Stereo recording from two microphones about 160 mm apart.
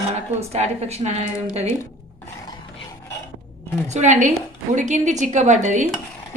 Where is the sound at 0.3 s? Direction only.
40° right (ahead or behind).